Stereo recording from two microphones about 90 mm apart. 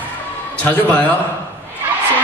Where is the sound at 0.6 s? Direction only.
20° left (ahead or behind).